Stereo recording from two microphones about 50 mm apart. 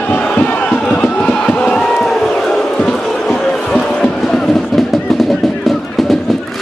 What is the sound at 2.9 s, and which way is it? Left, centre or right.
Music, centre.